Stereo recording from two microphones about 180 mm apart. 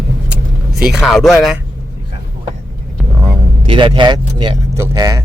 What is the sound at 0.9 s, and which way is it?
Speech, centre (ahead or behind).